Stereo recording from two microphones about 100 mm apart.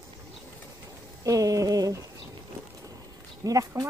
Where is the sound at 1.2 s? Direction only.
35° right (ahead or behind).